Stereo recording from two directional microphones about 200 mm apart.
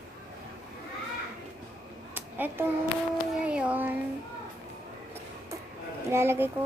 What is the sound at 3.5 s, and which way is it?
Speech, 5° right (ahead or behind).